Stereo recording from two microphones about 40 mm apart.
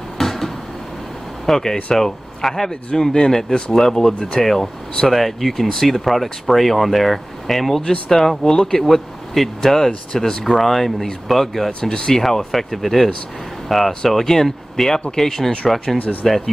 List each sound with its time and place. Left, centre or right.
0.2 s a sound: centre
1.4 s speech: centre
8.8 s speech: centre
10.4 s speech: centre
11.8 s speech: centre
12.2 s speech: centre
16.0 s speech: left